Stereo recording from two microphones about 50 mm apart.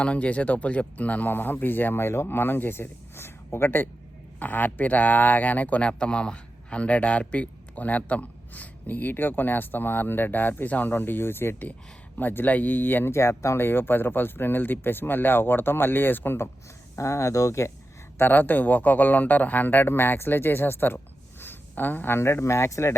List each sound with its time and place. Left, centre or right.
0.0 s speech: left
1.3 s speech: left
4.4 s a man's voice: left
5.9 s a man's voice: left
13.1 s speech: left
13.6 s speech: left
16.9 s speech: left
18.2 s a man's voice: left
21.4 s a sound: left
22.2 s speech: left